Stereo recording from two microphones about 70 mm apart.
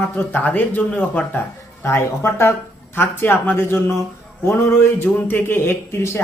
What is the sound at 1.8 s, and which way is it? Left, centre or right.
A man's voice, left.